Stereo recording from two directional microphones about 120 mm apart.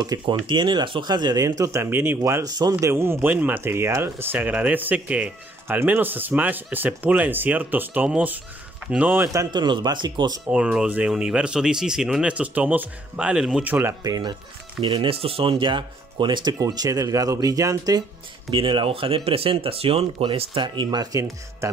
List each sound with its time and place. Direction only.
0.0 s speech: 35° right (ahead or behind)
2.8 s speech: 20° right (ahead or behind)
9.5 s speech: 40° right (ahead or behind)
10.4 s speech: 10° right (ahead or behind)
14.0 s speech: 30° right (ahead or behind)
14.8 s speech: 45° right (ahead or behind); by 18.0 s 30° right (ahead or behind)
18.5 s speech: 45° right (ahead or behind); by 21.6 s 25° right (ahead or behind)